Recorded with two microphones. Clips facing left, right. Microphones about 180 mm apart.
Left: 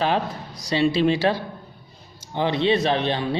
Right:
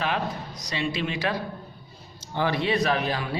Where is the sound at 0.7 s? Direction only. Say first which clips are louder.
Left 10 dB; 30° left (ahead or behind).